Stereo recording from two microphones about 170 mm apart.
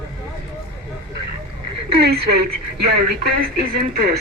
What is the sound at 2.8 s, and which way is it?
Speech, 65° right (ahead or behind).